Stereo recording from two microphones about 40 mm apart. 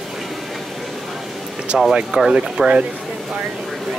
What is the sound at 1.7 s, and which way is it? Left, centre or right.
Speech, centre.